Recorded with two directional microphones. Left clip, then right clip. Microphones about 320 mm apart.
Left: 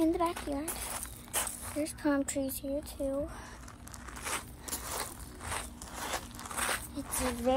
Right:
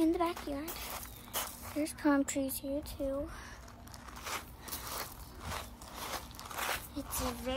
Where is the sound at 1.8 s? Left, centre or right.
Centre.